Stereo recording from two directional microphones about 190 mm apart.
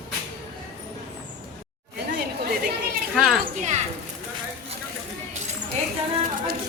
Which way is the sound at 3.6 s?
40° right (ahead or behind).